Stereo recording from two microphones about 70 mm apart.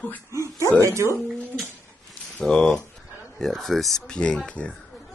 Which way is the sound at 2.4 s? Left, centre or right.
Centre.